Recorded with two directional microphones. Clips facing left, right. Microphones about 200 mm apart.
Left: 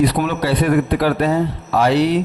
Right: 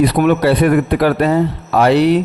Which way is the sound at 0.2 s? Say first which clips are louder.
Right 6 dB; 60° right (ahead or behind).